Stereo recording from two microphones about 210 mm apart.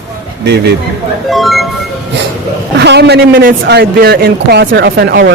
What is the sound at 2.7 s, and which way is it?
A man's voice, 55° right (ahead or behind).